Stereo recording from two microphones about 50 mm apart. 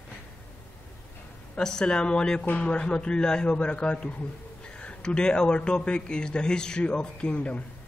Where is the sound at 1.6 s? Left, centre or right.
Centre.